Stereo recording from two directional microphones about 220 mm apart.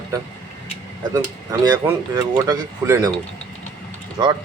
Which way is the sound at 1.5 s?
15° right (ahead or behind).